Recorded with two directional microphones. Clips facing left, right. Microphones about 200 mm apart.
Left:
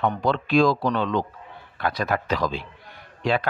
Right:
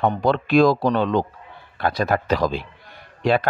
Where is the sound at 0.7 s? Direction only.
35° right (ahead or behind).